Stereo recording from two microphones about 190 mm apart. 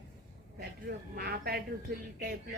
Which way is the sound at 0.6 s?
55° right (ahead or behind).